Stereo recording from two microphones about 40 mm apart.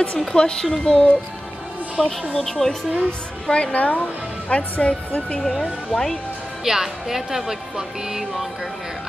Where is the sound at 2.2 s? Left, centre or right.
Centre.